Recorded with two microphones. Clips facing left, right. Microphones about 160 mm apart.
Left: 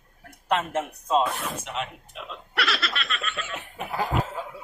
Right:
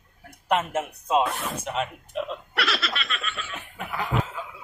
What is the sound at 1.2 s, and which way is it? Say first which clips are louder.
Snicker: right 1 dB; centre (ahead or behind).